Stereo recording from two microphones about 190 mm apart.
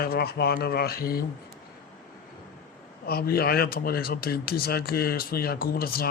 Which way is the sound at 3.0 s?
55° left (ahead or behind).